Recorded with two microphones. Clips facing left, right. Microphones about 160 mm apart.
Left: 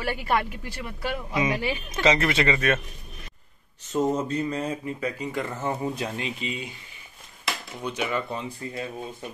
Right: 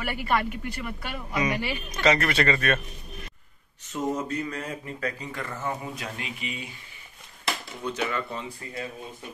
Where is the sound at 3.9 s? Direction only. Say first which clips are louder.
Left 4 dB; 35° left (ahead or behind).